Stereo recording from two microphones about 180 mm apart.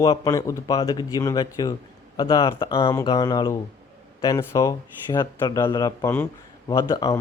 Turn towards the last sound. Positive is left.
turn(degrees=20)  # may be behind; listen again after turning